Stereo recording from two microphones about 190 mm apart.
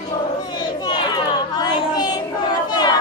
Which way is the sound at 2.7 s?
20° left (ahead or behind).